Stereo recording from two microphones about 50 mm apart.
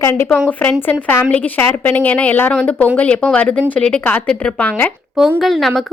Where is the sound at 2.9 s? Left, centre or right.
Left.